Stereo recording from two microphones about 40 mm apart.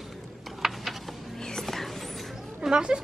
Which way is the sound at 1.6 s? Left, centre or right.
Centre.